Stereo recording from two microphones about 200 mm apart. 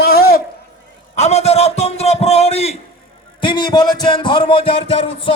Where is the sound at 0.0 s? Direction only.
50° left (ahead or behind).